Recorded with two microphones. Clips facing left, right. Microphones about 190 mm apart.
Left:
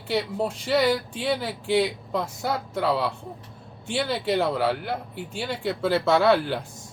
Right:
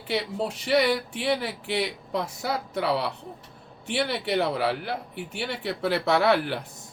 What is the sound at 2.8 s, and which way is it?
Speech, 70° right (ahead or behind).